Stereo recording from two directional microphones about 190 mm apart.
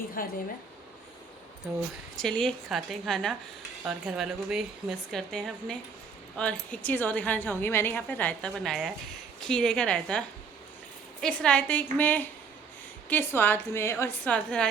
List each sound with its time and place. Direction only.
0.2 s a woman's voice: 50° left (ahead or behind)
2.1 s a woman's voice: 5° left (ahead or behind)